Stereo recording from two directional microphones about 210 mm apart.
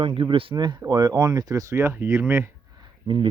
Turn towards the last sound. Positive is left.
turn(degrees=-20)  # may be behind; listen again after turning